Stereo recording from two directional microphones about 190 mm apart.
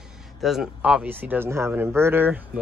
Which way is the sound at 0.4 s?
Centre (ahead or behind).